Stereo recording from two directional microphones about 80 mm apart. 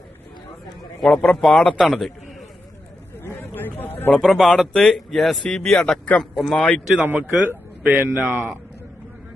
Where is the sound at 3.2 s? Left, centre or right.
Left.